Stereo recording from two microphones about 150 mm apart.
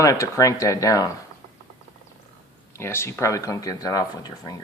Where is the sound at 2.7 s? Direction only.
15° left (ahead or behind).